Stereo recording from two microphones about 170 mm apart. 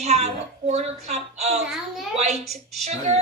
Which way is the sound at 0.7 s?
40° right (ahead or behind).